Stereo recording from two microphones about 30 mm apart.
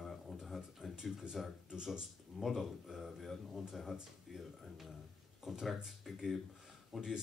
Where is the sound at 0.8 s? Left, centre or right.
Right.